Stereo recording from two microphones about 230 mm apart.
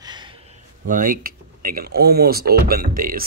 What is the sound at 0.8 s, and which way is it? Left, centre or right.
Speech, right.